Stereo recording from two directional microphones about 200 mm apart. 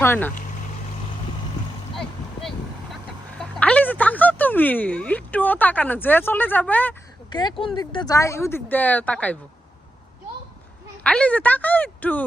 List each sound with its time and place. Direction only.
0.0 s speech: 10° left (ahead or behind)
2.9 s a sound: 5° left (ahead or behind)
7.3 s speech: 20° left (ahead or behind)
11.0 s speech: 5° left (ahead or behind)